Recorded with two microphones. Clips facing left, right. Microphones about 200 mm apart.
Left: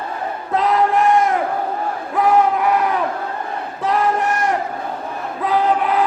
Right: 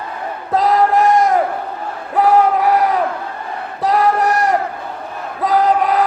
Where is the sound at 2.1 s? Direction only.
35° right (ahead or behind).